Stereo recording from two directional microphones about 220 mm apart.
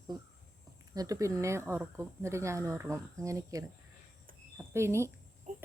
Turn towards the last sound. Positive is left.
turn(degrees=-35)  # may be behind; listen again after turning